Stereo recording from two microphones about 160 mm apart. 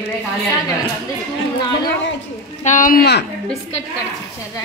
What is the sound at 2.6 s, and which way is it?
Speech, 55° left (ahead or behind).